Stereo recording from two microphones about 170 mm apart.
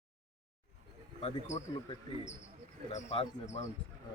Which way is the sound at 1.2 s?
40° left (ahead or behind).